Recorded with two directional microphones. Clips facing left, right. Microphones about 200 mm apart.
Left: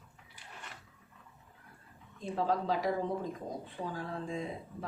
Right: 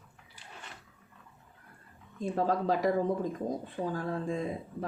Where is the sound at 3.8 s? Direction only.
60° right (ahead or behind).